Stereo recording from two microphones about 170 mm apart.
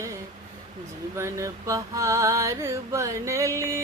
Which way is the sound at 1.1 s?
15° right (ahead or behind).